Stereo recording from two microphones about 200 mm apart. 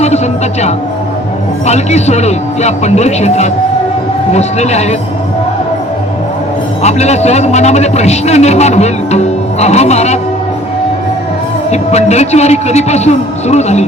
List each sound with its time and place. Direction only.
1.6 s a man's voice: 35° left (ahead or behind)
6.8 s a man's voice: 35° left (ahead or behind)
11.7 s a man's voice: 35° left (ahead or behind)